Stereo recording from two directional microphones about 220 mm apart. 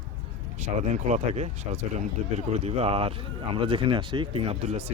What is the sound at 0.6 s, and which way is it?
Speech, 30° right (ahead or behind).